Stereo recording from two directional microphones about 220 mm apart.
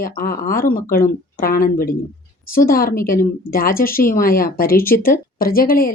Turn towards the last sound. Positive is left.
turn(degrees=40)  # may be behind; listen again after turning